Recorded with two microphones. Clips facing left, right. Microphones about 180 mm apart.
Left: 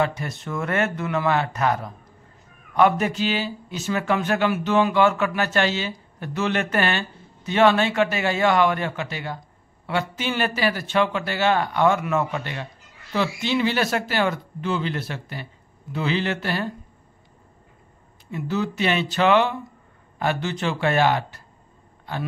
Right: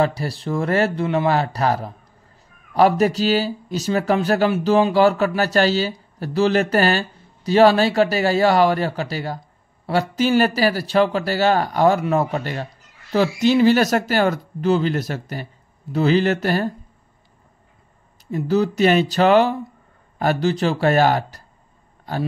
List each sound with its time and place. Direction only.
0.0 s speech: 35° right (ahead or behind)
18.3 s speech: 40° right (ahead or behind)